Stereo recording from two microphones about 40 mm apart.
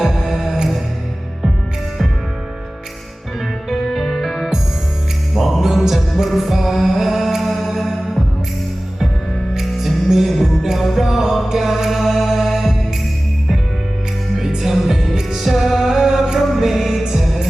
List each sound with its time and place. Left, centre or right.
0.0 s music: centre
3.7 s music: centre
9.6 s music: centre
14.7 s music: centre
15.4 s music: centre